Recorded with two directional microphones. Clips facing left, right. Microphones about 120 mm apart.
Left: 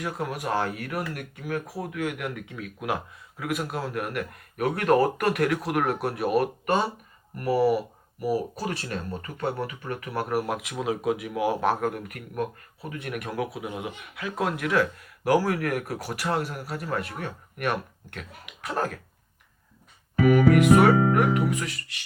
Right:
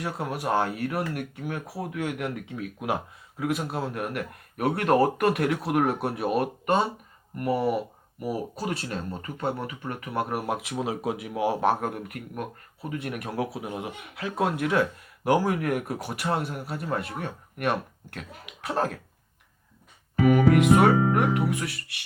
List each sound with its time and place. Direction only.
0.0 s speech: 30° right (ahead or behind)
20.2 s speech: 25° right (ahead or behind)